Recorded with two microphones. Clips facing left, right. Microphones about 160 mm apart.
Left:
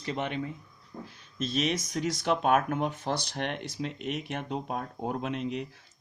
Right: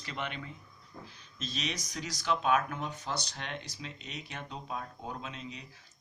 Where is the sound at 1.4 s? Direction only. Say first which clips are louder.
Left 9 dB; 50° left (ahead or behind).